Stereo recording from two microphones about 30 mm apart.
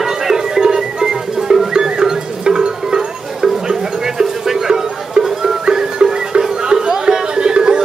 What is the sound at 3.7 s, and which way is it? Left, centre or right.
Music, centre.